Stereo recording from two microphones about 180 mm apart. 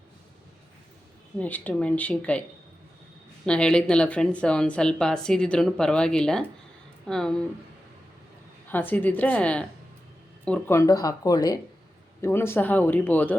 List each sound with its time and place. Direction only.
1.4 s speech: 10° left (ahead or behind)
3.4 s speech: 5° left (ahead or behind)
8.7 s speech: 10° left (ahead or behind)